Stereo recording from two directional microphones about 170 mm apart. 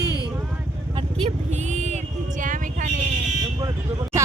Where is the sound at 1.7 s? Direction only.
40° right (ahead or behind).